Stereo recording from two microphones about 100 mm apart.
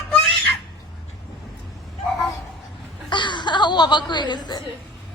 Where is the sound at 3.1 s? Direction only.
50° left (ahead or behind).